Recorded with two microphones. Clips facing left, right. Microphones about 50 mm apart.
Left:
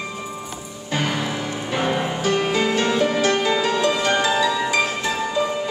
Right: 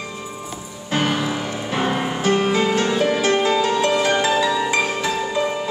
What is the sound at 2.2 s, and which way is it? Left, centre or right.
Music, right.